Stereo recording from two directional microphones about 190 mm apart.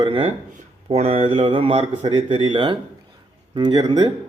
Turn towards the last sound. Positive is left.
turn(degrees=-25)  # may be behind; listen again after turning